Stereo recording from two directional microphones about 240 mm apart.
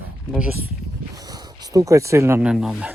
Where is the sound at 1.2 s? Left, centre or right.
Centre.